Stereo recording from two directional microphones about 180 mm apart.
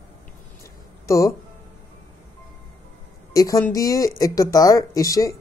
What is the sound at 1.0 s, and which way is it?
Speech, 15° left (ahead or behind).